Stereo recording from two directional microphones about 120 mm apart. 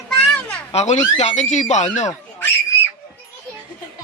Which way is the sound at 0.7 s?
70° left (ahead or behind).